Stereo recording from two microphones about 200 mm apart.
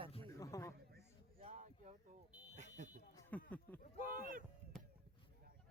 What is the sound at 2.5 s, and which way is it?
Fire alarm, 35° right (ahead or behind).